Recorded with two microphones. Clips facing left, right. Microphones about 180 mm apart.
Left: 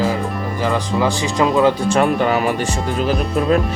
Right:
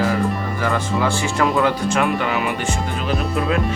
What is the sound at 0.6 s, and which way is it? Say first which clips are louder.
Speech: left 3 dB; 20° left (ahead or behind).